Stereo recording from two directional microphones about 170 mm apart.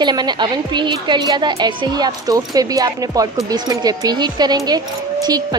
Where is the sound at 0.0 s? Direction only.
25° right (ahead or behind).